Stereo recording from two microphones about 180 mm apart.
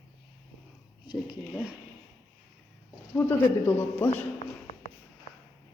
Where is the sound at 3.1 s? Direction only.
10° left (ahead or behind).